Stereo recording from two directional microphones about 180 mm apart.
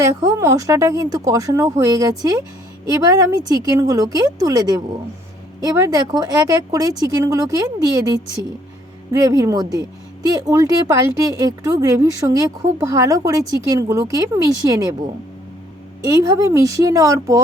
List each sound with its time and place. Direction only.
0.0 s a woman's voice: 20° right (ahead or behind)
9.2 s a woman's voice: 20° right (ahead or behind)
16.0 s speech: 20° right (ahead or behind)